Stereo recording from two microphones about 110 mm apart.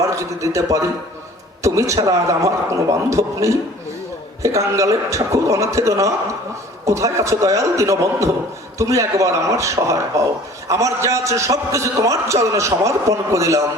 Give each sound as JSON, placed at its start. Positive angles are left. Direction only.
{"t": 0.0, "sound": "a man's voice", "side_deg": -30}